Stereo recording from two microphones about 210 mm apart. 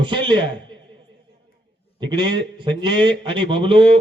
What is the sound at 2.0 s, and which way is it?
Speech, 20° right (ahead or behind).